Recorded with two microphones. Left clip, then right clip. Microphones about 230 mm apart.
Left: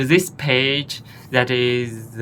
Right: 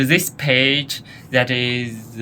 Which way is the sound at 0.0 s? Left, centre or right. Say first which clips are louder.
Even; centre.